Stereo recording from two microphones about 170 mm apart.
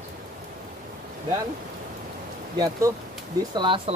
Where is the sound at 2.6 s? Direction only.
20° right (ahead or behind).